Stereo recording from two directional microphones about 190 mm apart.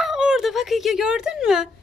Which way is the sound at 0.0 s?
5° right (ahead or behind).